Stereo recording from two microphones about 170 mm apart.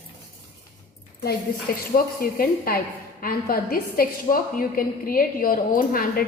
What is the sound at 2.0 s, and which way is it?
A woman's voice, 60° left (ahead or behind).